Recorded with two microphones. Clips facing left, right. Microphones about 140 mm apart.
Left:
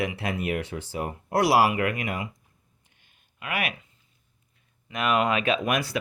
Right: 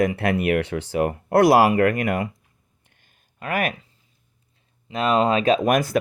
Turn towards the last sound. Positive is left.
turn(degrees=-45)  # may be behind; listen again after turning